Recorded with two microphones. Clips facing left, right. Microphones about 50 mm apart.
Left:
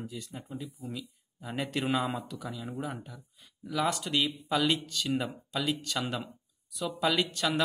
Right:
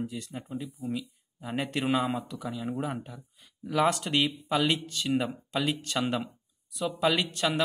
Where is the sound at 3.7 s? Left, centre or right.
Right.